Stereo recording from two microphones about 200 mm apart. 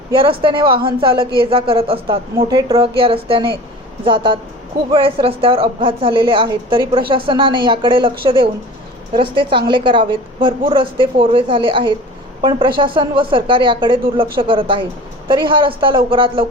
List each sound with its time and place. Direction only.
0.1 s a woman's voice: 25° right (ahead or behind)